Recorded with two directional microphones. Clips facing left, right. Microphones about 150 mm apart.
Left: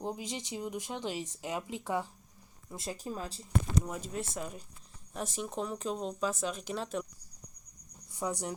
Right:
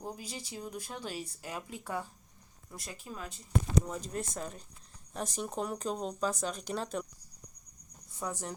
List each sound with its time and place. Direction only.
0.0 s speech: 20° left (ahead or behind)
3.0 s speech: 35° left (ahead or behind)
3.8 s speech: 5° left (ahead or behind)
8.2 s speech: 15° left (ahead or behind)